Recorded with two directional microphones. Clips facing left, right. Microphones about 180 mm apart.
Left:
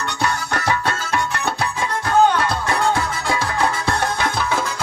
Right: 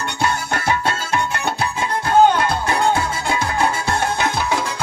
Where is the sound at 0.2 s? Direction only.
25° right (ahead or behind).